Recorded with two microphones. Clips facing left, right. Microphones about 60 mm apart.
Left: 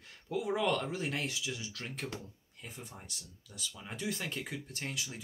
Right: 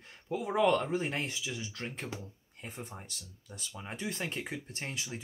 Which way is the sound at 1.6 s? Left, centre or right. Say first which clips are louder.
Right 2 dB; right.